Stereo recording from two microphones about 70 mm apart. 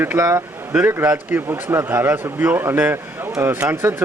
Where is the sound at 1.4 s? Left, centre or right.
Right.